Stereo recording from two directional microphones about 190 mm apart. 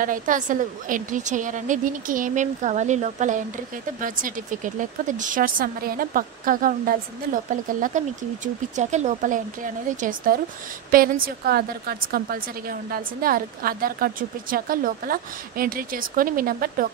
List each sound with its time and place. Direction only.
0.0 s speech: 45° right (ahead or behind)
8.7 s speech: 40° right (ahead or behind)